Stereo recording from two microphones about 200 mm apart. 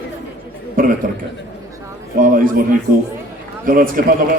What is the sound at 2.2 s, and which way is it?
Speech, 45° right (ahead or behind).